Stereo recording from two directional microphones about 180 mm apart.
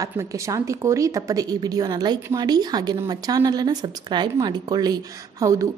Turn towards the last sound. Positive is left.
turn(degrees=-20)  # may be behind; listen again after turning